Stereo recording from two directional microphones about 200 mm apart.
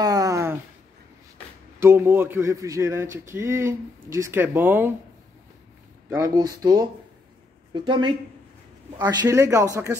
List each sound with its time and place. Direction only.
0.0 s a sound: 20° right (ahead or behind)
1.8 s speech: 10° right (ahead or behind)
6.0 s speech: 15° right (ahead or behind)